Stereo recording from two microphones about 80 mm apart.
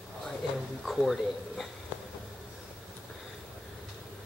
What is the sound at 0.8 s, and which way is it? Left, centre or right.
Speech, centre.